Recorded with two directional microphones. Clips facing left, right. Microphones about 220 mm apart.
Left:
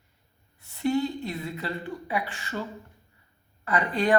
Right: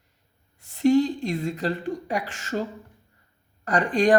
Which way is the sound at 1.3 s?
45° right (ahead or behind).